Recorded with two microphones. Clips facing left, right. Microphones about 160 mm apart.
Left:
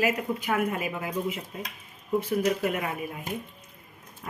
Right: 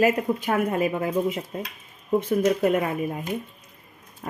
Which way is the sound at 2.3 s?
30° right (ahead or behind).